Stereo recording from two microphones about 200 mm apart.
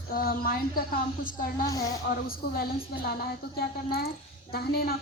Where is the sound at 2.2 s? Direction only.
50° left (ahead or behind).